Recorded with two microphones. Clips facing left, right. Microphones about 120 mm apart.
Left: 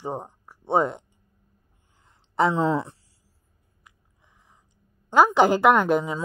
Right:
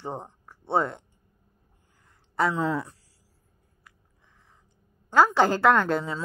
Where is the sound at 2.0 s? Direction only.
20° left (ahead or behind).